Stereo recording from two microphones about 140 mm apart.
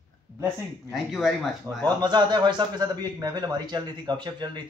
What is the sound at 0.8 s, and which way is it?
Speech, centre (ahead or behind).